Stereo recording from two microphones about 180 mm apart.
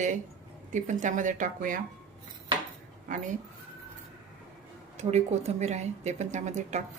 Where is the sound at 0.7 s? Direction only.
45° right (ahead or behind).